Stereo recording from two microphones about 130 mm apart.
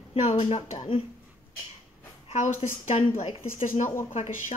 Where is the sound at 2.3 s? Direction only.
55° left (ahead or behind).